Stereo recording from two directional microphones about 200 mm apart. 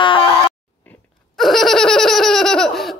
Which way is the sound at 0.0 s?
25° left (ahead or behind).